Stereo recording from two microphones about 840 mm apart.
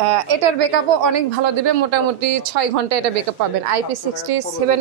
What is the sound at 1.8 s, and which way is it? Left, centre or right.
Speech, right.